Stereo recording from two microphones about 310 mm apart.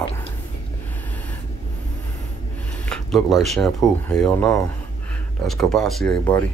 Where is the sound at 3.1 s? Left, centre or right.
Centre.